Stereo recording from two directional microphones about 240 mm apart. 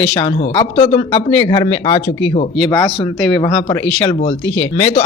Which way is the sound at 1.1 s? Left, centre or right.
Centre.